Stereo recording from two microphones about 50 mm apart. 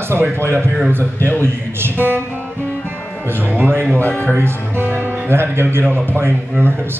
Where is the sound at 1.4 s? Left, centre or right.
Right.